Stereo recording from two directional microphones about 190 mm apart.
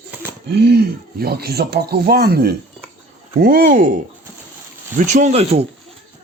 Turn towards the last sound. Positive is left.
turn(degrees=-30)  # may be behind; listen again after turning